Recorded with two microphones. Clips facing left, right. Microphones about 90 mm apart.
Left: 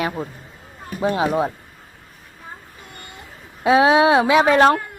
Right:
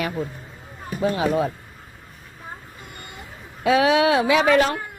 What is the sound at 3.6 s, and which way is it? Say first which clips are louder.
Speech: left 3 dB; 25° left (ahead or behind).